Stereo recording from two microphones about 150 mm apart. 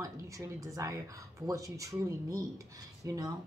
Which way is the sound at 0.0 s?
20° right (ahead or behind).